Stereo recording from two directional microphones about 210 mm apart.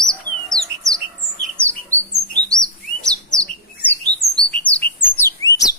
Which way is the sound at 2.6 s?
5° left (ahead or behind).